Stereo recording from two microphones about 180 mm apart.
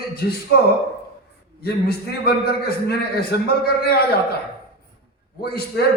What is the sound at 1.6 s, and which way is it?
A man's voice, 60° left (ahead or behind).